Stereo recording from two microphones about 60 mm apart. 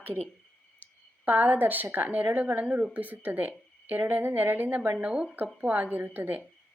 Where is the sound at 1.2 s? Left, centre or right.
Right.